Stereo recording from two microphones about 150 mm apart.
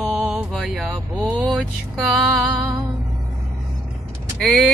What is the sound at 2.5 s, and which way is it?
Music, 25° right (ahead or behind).